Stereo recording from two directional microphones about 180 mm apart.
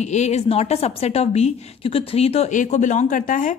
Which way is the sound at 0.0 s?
40° left (ahead or behind).